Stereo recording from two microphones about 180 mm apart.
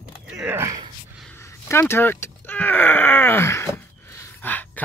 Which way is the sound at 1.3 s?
15° left (ahead or behind).